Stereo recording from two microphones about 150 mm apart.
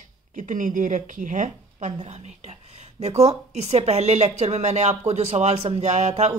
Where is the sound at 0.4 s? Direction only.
60° right (ahead or behind).